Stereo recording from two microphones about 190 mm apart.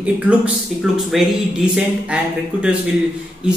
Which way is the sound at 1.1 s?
5° right (ahead or behind).